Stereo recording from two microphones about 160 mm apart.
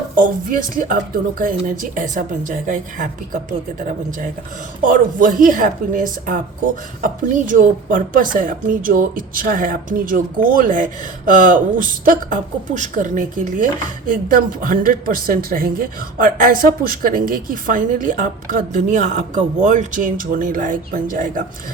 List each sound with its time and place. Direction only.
0.2 s speech: 55° right (ahead or behind)